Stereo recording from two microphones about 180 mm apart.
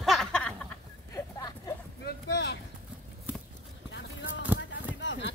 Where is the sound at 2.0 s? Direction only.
70° left (ahead or behind).